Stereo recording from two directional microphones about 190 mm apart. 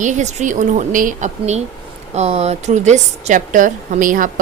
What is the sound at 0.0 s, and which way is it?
A woman's voice, 40° right (ahead or behind).